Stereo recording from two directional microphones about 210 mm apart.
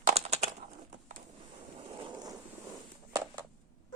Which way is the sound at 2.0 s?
20° right (ahead or behind).